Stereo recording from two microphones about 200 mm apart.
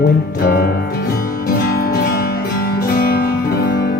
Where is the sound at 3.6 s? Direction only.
45° left (ahead or behind).